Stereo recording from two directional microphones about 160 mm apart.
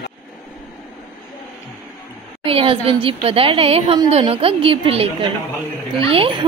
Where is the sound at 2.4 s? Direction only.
35° right (ahead or behind).